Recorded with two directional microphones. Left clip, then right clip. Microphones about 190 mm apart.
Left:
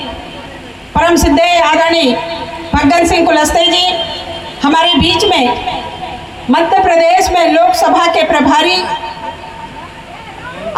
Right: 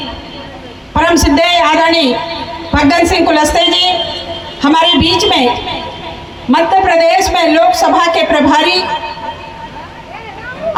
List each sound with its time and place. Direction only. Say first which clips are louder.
0.9 s a woman's voice: even; 15° left (ahead or behind)